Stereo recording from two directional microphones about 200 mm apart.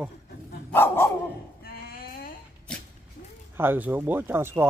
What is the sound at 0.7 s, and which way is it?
Dog, 10° left (ahead or behind).